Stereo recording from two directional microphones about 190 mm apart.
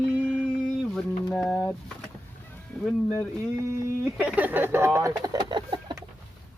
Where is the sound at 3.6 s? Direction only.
15° right (ahead or behind).